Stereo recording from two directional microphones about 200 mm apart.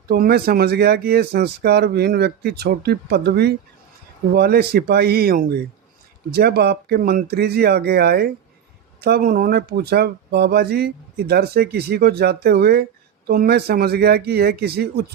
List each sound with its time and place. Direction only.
0.1 s speech: 50° right (ahead or behind)